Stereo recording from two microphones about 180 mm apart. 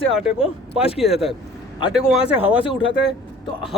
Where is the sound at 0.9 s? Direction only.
Centre (ahead or behind).